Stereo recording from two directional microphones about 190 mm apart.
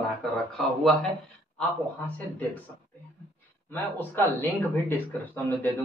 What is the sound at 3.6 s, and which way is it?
Speech, 10° left (ahead or behind).